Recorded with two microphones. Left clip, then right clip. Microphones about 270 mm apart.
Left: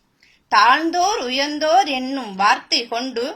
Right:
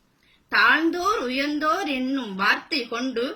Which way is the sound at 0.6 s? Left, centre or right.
Left.